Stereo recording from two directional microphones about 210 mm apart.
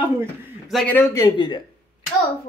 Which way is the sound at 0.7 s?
5° left (ahead or behind).